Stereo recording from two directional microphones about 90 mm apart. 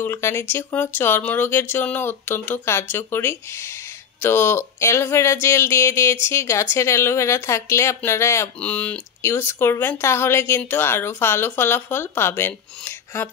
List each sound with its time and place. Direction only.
0.0 s speech: 30° left (ahead or behind)
8.5 s speech: 15° left (ahead or behind)
9.2 s speech: 30° left (ahead or behind)